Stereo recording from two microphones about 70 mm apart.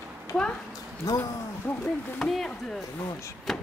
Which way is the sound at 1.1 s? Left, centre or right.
Left.